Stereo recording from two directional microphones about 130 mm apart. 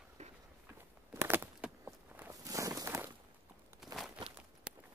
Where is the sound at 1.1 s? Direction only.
20° right (ahead or behind).